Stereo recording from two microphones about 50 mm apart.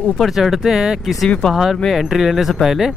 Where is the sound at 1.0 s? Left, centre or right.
Centre.